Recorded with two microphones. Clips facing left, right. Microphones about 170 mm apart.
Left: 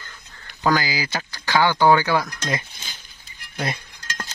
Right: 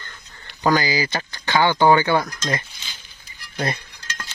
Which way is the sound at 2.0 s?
Centre (ahead or behind).